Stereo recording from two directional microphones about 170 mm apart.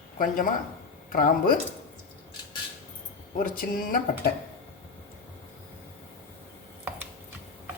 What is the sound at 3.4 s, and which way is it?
Speech, 55° left (ahead or behind).